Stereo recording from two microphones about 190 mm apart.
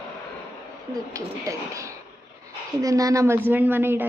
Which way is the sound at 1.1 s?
15° right (ahead or behind).